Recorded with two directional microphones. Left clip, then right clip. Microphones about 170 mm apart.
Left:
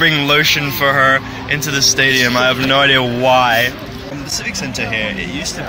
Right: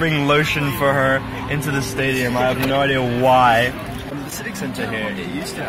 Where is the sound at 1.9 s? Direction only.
20° left (ahead or behind).